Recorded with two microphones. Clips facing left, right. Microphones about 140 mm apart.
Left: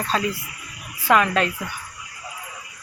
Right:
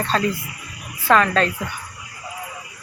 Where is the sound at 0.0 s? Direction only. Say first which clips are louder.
Right 3 dB; 5° left (ahead or behind).